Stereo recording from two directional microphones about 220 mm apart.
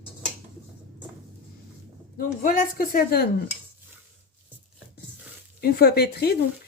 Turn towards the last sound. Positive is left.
turn(degrees=45)  # may be behind; listen again after turning